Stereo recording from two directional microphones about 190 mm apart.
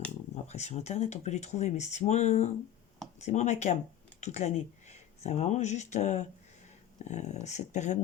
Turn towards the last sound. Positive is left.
turn(degrees=40)  # may be behind; listen again after turning